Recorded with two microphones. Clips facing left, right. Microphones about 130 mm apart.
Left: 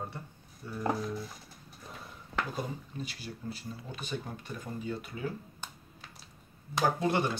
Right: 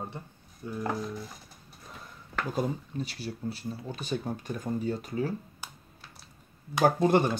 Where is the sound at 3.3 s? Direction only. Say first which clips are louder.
Right 5 dB; 40° right (ahead or behind).